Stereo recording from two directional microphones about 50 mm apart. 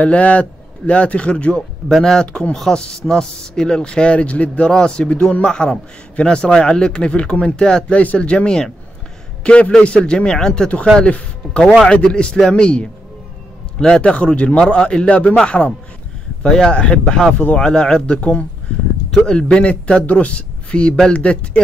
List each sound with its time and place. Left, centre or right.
0.0 s a man's voice: left
1.9 s a man's voice: centre; by 4.6 s left
4.6 s a man's voice: centre
11.0 s a man's voice: left
18.0 s a man's voice: left
19.4 s a man's voice: left